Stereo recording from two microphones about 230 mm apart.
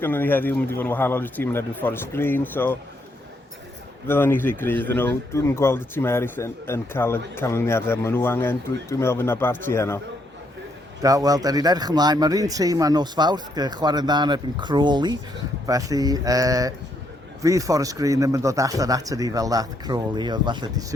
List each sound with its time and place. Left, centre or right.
0.0 s speech: centre
4.0 s speech: centre
11.0 s speech: centre